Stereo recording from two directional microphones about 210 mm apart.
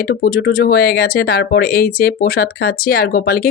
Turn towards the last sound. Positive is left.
turn(degrees=45)  # may be behind; listen again after turning